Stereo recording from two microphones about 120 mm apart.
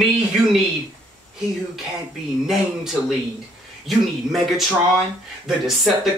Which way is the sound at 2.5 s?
Centre (ahead or behind).